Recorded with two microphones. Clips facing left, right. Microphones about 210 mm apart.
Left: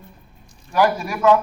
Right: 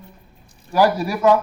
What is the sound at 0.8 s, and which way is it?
Speech, 35° right (ahead or behind).